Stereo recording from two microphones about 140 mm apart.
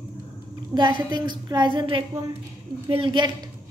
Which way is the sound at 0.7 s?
35° right (ahead or behind).